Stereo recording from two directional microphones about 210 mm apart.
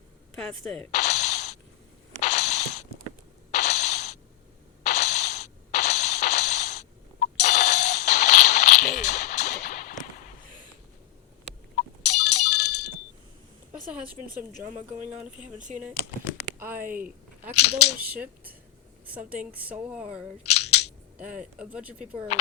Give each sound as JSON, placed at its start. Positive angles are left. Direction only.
{"t": 0.6, "sound": "speech", "side_deg": 0}
{"t": 0.9, "sound": "coin", "side_deg": 35}
{"t": 2.2, "sound": "a sound", "side_deg": 35}
{"t": 3.5, "sound": "mechanisms", "side_deg": 35}
{"t": 4.9, "sound": "a sound", "side_deg": 35}
{"t": 7.4, "sound": "music", "side_deg": 35}
{"t": 11.8, "sound": "ringtone", "side_deg": 30}
{"t": 14.2, "sound": "speech", "side_deg": -45}
{"t": 16.6, "sound": "speech", "side_deg": -10}
{"t": 17.6, "sound": "speech", "side_deg": 30}
{"t": 18.0, "sound": "speech", "side_deg": -5}
{"t": 20.4, "sound": "scissors", "side_deg": 30}
{"t": 21.3, "sound": "speech", "side_deg": -5}